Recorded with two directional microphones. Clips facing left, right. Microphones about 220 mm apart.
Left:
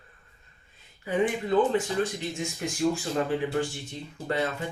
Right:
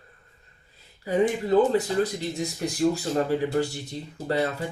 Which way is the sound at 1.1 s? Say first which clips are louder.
Right 3 dB; 40° right (ahead or behind).